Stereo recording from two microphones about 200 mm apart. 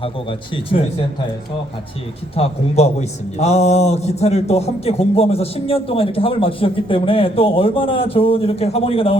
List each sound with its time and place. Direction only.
0.0 s a man's voice: 25° left (ahead or behind)
2.3 s a man's voice: 30° left (ahead or behind)